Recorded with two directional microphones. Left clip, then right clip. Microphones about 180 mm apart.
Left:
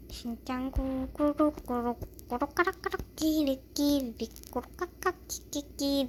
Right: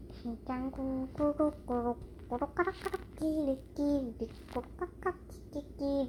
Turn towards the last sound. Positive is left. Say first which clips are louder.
# left 3 dB
turn(degrees=30)  # may be behind; listen again after turning